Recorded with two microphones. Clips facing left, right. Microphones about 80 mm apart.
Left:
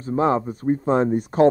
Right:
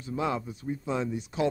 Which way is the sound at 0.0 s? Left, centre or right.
Left.